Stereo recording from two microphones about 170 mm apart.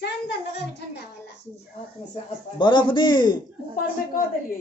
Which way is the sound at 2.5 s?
25° left (ahead or behind).